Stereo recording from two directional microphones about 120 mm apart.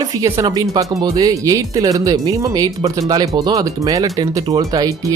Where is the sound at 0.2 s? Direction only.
30° right (ahead or behind).